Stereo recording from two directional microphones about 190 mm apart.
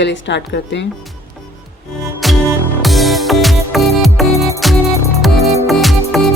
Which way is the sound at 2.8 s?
Centre (ahead or behind).